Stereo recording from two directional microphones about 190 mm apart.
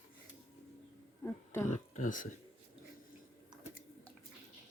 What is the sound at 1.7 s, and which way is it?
Speech, 40° left (ahead or behind).